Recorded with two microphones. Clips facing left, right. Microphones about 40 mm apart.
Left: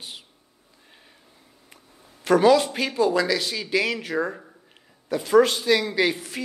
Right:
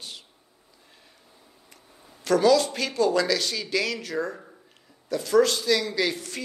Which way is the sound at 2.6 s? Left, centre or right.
Centre.